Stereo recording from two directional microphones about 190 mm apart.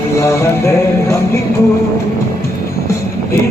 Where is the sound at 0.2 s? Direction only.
15° left (ahead or behind).